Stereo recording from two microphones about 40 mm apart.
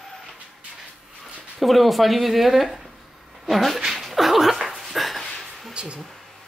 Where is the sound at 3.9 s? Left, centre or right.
Centre.